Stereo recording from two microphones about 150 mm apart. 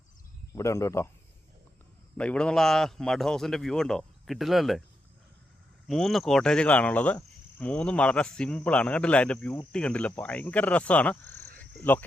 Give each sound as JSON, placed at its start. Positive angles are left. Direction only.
{"t": 0.5, "sound": "speech", "side_deg": 20}
{"t": 2.1, "sound": "a man's voice", "side_deg": 10}
{"t": 5.9, "sound": "cricket", "side_deg": 0}